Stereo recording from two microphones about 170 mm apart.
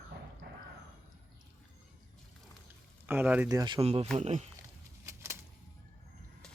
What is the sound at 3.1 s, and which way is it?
Speech, 10° right (ahead or behind).